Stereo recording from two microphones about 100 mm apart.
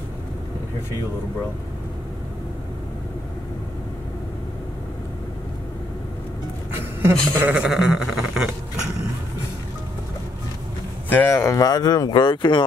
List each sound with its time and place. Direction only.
6.8 s speech: 20° right (ahead or behind)
7.5 s a sound: 5° right (ahead or behind)
11.1 s speech: 20° left (ahead or behind)
11.6 s speech: 40° left (ahead or behind)